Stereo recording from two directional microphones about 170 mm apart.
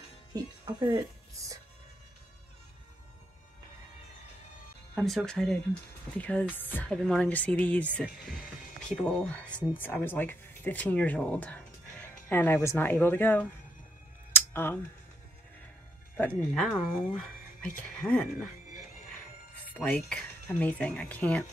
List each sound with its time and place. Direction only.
0.3 s speech: 20° right (ahead or behind)
4.9 s speech: 5° left (ahead or behind)
14.3 s a sound: 10° left (ahead or behind)
16.2 s speech: 5° left (ahead or behind)
19.7 s speech: 5° left (ahead or behind)